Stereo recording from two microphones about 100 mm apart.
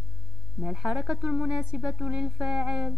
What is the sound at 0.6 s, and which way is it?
A woman's voice, 5° right (ahead or behind).